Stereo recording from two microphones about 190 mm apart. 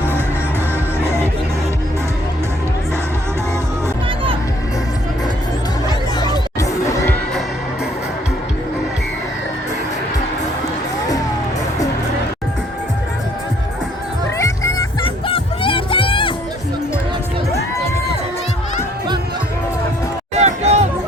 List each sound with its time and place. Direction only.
6.1 s music: 20° left (ahead or behind)
14.3 s music: 15° left (ahead or behind)
15.3 s music: 30° left (ahead or behind)
20.3 s a sound: 35° right (ahead or behind)